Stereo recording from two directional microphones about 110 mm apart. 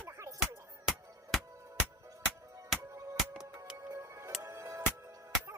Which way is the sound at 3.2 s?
5° left (ahead or behind).